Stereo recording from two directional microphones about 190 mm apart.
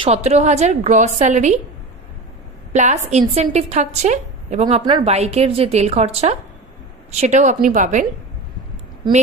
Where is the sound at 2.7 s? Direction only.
40° right (ahead or behind).